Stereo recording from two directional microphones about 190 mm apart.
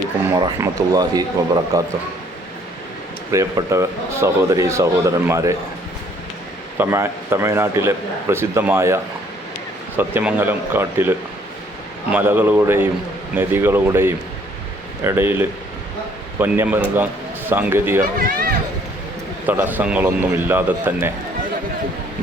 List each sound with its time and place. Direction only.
0.3 s speech: 20° right (ahead or behind)
3.3 s a man's voice: 15° right (ahead or behind)
6.7 s a man's voice: 10° right (ahead or behind)
10.0 s a man's voice: 10° right (ahead or behind)
12.1 s a man's voice: 10° right (ahead or behind)
18.0 s speech: 50° right (ahead or behind)
19.5 s a man's voice: 10° right (ahead or behind)